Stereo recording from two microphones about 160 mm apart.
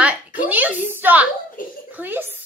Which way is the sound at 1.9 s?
10° right (ahead or behind).